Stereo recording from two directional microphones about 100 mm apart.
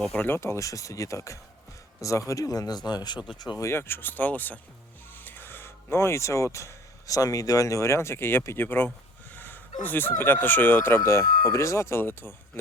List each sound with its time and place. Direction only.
0.2 s speech: 25° left (ahead or behind); by 3.6 s 45° left (ahead or behind)
3.6 s speech: 25° left (ahead or behind)